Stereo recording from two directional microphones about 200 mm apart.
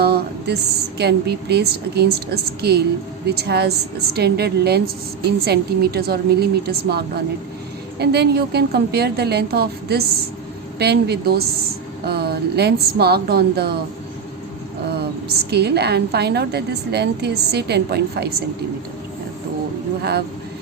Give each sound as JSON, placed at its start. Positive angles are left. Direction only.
{"t": 0.0, "sound": "a woman's voice", "side_deg": -55}
{"t": 15.4, "sound": "a woman's voice", "side_deg": -55}
{"t": 20.0, "sound": "speech", "side_deg": -50}